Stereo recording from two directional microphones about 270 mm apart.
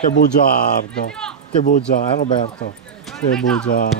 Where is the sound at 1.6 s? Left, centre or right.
Left.